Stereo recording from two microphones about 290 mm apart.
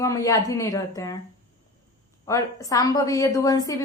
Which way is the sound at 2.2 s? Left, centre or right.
Centre.